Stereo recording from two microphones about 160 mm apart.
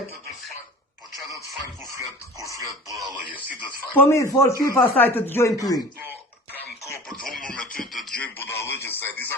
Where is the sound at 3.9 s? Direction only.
15° left (ahead or behind).